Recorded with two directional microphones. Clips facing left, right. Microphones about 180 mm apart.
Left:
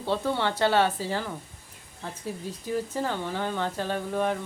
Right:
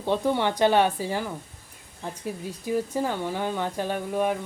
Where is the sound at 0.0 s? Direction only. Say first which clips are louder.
Right 3 dB; 15° right (ahead or behind).